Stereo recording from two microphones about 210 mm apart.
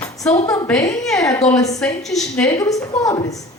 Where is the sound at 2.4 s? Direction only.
15° left (ahead or behind).